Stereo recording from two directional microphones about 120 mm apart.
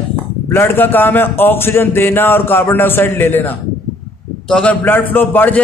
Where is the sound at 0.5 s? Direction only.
20° left (ahead or behind).